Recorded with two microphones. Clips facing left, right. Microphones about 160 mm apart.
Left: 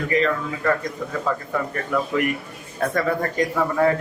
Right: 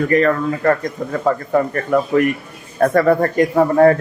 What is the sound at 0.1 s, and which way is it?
A man's voice, 50° right (ahead or behind).